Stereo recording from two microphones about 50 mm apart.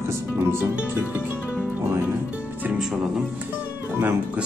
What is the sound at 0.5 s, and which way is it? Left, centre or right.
Music, right.